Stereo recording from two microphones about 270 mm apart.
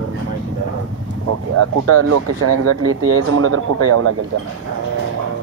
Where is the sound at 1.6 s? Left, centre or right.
Right.